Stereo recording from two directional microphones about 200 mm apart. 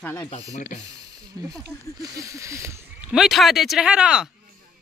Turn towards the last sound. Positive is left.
turn(degrees=-5)  # may be behind; listen again after turning